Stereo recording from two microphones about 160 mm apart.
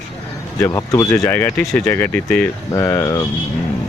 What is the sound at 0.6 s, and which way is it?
Speech, 20° left (ahead or behind).